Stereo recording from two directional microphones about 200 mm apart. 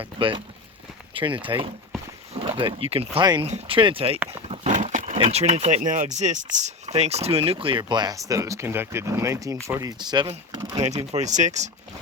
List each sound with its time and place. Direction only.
0.0 s speech: 25° right (ahead or behind)
10.8 s speech: 35° right (ahead or behind)